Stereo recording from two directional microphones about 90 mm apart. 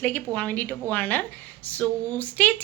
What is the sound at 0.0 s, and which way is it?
A woman's voice, 20° left (ahead or behind).